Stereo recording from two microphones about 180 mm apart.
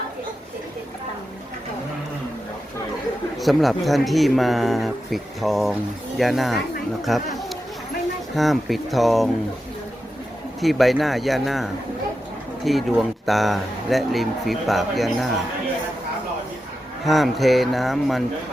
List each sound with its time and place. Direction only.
3.3 s speech: centre (ahead or behind)
8.4 s speech: centre (ahead or behind)
10.6 s speech: centre (ahead or behind)
17.1 s speech: centre (ahead or behind)